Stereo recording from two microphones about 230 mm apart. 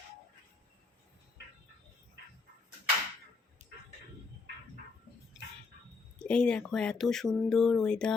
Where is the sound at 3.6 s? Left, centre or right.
Right.